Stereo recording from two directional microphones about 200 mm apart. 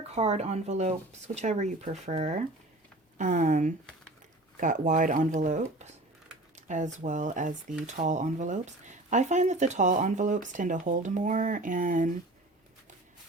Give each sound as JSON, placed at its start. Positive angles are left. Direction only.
{"t": 0.1, "sound": "speech", "side_deg": -35}